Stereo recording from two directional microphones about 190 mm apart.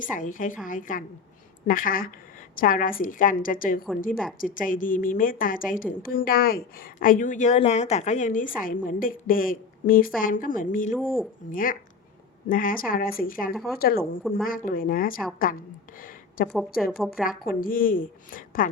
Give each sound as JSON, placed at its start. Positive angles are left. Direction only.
{"t": 0.0, "sound": "a woman's voice", "side_deg": 45}
{"t": 16.0, "sound": "a sound", "side_deg": 45}
{"t": 16.5, "sound": "a woman's voice", "side_deg": 0}
{"t": 17.2, "sound": "a woman's voice", "side_deg": 50}